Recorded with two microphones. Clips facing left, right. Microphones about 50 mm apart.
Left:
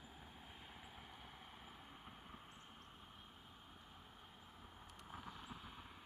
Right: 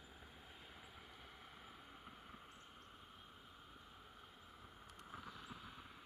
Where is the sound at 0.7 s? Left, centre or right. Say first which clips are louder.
Left 1 dB; centre.